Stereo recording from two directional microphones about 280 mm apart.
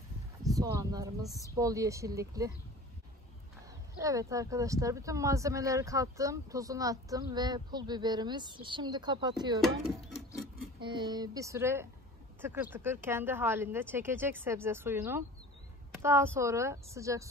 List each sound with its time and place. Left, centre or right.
0.4 s speech: centre
4.0 s speech: centre
9.6 s speech: centre
10.8 s speech: centre